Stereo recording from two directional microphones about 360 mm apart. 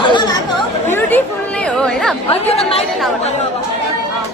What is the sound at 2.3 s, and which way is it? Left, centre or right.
Speech, centre.